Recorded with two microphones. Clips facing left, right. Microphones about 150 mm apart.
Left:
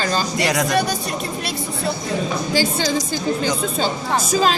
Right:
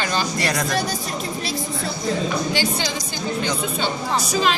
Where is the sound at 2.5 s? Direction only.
40° left (ahead or behind).